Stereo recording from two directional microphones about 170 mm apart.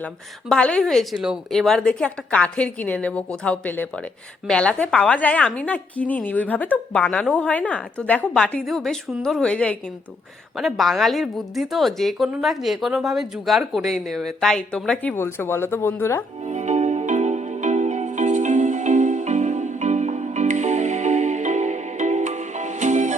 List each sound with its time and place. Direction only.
0.0 s a woman's voice: 5° left (ahead or behind)
16.5 s music: 40° right (ahead or behind)